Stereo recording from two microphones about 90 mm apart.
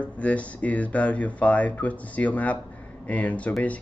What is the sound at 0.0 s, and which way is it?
Speech, 15° left (ahead or behind).